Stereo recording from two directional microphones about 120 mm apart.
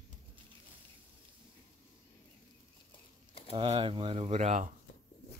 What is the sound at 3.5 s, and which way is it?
Speech, 50° right (ahead or behind).